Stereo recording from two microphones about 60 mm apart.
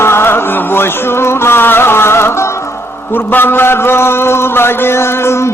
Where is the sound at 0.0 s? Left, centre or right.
Left.